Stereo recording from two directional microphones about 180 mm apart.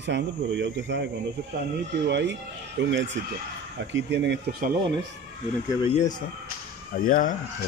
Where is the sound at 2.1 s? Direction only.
75° right (ahead or behind).